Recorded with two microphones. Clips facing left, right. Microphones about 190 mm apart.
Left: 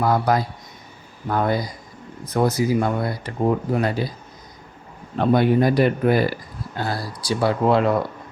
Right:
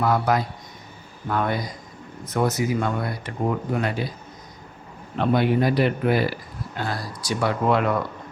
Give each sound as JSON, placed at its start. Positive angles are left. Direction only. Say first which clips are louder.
{"t": 0.0, "sound": "speech", "louder": "left 2 dB", "side_deg": 35}
{"t": 5.2, "sound": "speech", "louder": "left 3 dB", "side_deg": 45}